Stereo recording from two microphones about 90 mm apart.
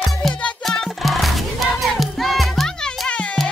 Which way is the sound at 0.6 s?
Centre (ahead or behind).